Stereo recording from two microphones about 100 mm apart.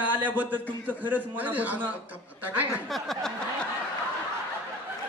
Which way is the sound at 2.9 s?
Centre (ahead or behind).